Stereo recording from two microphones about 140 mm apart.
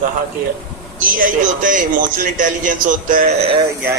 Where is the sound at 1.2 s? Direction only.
70° right (ahead or behind).